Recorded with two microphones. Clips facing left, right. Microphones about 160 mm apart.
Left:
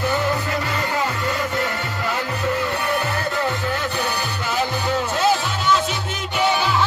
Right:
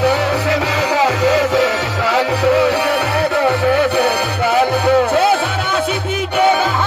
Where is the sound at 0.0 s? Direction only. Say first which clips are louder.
Right 6 dB; 75° right (ahead or behind).